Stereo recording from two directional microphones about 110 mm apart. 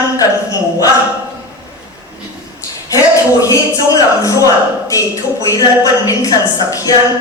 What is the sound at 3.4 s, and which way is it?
A man's voice, 30° left (ahead or behind).